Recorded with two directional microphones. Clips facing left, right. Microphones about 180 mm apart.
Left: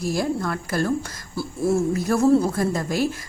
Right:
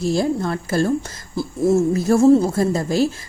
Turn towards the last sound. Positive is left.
turn(degrees=-25)  # may be behind; listen again after turning